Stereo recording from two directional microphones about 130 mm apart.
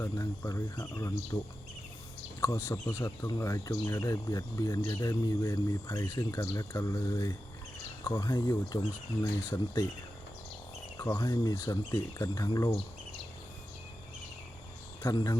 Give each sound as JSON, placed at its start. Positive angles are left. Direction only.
{"t": 0.0, "sound": "speech", "side_deg": 25}
{"t": 2.4, "sound": "speech", "side_deg": 20}
{"t": 10.9, "sound": "speech", "side_deg": 20}
{"t": 15.1, "sound": "speech", "side_deg": 30}